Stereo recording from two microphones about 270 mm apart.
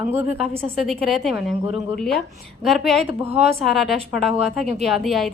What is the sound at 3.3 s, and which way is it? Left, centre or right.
Speech, right.